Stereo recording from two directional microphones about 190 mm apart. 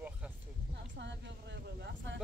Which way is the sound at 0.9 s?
65° right (ahead or behind).